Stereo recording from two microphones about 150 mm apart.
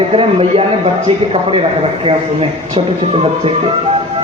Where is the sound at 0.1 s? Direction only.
40° right (ahead or behind).